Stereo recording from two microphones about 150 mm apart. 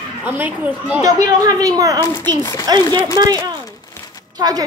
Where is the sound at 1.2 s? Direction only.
25° right (ahead or behind).